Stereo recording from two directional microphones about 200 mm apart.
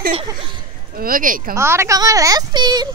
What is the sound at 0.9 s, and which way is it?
Speech, 45° right (ahead or behind).